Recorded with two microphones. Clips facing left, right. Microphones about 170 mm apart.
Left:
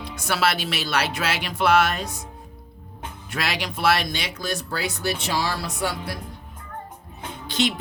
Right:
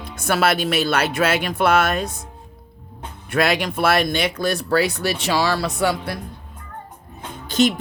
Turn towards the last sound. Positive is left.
turn(degrees=-45)  # may be behind; listen again after turning